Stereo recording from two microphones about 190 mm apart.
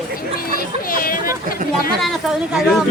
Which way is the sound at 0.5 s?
45° left (ahead or behind).